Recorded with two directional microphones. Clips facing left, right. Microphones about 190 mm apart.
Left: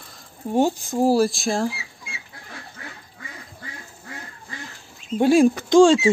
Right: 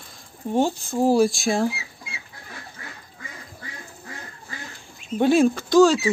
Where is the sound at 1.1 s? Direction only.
Centre (ahead or behind).